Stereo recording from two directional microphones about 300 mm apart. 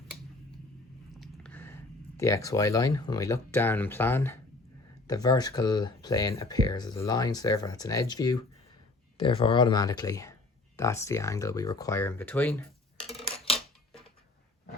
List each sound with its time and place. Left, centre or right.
1.2 s speech: centre
13.0 s scissors: centre